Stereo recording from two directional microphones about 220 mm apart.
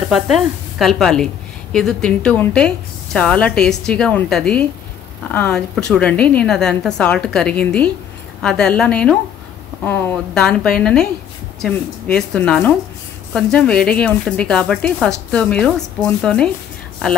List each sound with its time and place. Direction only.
0.1 s a woman's voice: centre (ahead or behind)